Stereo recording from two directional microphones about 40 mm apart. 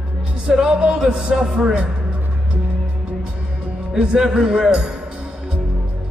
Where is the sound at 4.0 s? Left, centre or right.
Right.